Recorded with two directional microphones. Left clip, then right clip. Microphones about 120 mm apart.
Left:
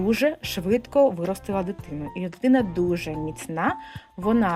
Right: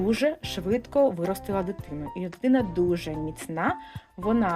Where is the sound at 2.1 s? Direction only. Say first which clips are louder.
Left 3 dB; 30° left (ahead or behind).